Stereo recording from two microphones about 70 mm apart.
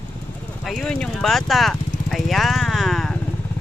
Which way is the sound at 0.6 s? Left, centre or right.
Centre.